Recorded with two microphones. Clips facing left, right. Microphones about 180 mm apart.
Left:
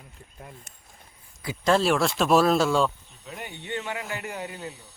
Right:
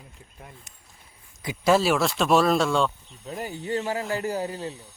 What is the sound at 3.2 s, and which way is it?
Speech, 35° right (ahead or behind).